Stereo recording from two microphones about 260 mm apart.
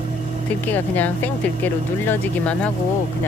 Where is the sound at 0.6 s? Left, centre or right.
Centre.